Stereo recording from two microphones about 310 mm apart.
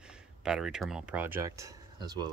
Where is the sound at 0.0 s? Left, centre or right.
Centre.